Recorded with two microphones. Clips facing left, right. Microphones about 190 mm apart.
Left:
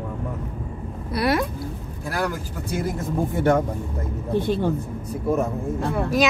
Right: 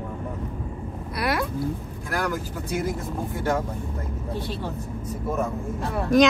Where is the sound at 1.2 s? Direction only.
25° left (ahead or behind).